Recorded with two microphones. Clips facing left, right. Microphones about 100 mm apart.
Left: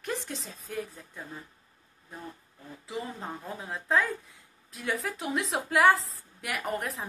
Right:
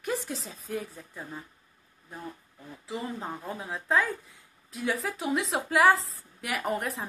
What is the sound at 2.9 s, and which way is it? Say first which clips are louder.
Speech: right 2 dB; centre (ahead or behind).